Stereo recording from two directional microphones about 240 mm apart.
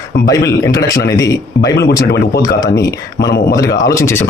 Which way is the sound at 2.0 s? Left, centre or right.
Left.